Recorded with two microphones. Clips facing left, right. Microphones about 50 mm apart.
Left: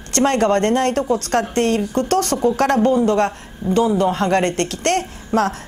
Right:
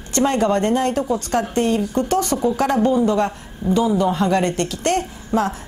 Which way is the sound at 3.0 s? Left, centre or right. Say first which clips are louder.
Left 2 dB; left.